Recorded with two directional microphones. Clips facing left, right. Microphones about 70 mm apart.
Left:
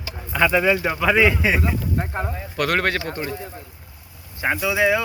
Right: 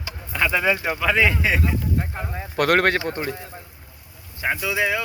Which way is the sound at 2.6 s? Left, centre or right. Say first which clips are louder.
Right 3 dB; right.